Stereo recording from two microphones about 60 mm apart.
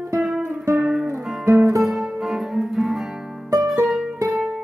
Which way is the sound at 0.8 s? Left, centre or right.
Centre.